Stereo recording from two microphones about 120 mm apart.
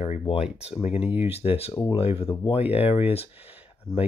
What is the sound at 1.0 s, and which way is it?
Speech, 15° right (ahead or behind).